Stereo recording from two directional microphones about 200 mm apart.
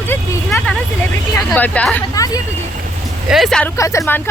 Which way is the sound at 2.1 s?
15° left (ahead or behind).